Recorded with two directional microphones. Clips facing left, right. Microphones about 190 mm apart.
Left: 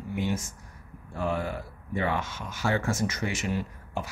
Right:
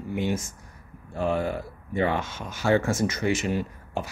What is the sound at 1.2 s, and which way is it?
Speech, 25° right (ahead or behind).